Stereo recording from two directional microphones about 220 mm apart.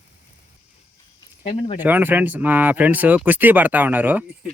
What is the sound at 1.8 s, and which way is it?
Speech, 10° right (ahead or behind).